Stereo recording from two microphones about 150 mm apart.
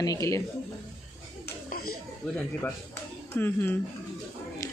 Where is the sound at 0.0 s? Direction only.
25° left (ahead or behind).